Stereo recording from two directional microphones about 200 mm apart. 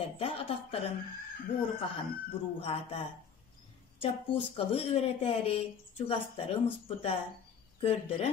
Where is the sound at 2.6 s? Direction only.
25° left (ahead or behind).